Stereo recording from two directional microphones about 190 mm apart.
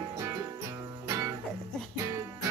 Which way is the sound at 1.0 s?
15° right (ahead or behind).